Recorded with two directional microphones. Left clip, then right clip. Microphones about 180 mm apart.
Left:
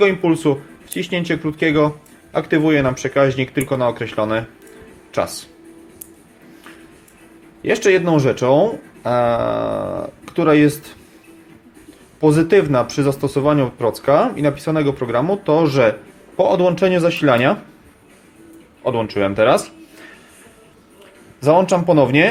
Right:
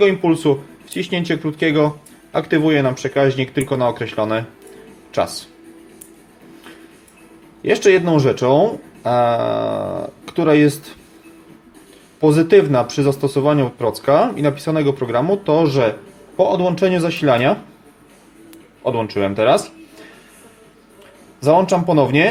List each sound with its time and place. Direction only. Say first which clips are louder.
0.0 s speech: even; 10° left (ahead or behind)
7.6 s speech: right 1 dB; 5° left (ahead or behind)
12.2 s speech: right 1 dB; 5° left (ahead or behind)
18.8 s speech: even; 10° left (ahead or behind)
21.4 s speech: even; 10° left (ahead or behind)